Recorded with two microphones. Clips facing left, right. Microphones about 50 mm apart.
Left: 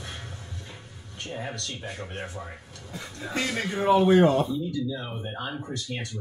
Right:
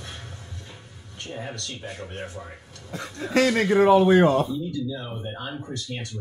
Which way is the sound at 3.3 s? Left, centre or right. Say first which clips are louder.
Right 9 dB; right.